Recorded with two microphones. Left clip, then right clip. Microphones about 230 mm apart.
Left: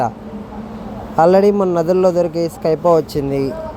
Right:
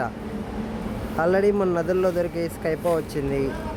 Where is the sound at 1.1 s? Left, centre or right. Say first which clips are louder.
Left 9 dB; left.